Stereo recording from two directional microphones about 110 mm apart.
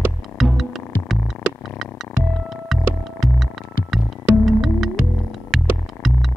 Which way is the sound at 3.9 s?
Centre (ahead or behind).